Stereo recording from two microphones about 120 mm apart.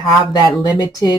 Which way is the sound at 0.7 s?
35° left (ahead or behind).